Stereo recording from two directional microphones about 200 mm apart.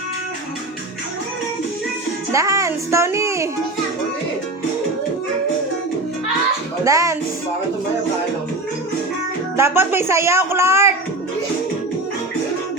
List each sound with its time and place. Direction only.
2.3 s speech: 15° right (ahead or behind)
6.8 s speech: 15° right (ahead or behind)
9.6 s speech: 10° right (ahead or behind)